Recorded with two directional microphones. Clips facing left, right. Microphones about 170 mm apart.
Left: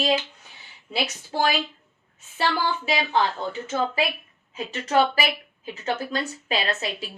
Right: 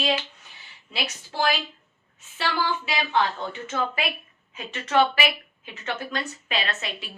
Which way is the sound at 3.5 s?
30° left (ahead or behind).